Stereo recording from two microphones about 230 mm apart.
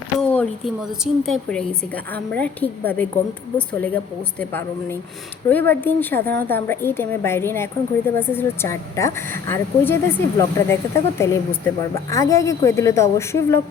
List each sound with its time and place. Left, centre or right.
0.2 s speech: centre